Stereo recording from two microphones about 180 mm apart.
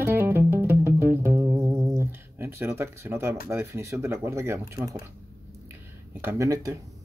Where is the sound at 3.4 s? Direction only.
15° right (ahead or behind).